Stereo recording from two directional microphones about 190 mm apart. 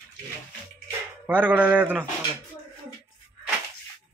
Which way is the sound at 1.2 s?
10° right (ahead or behind).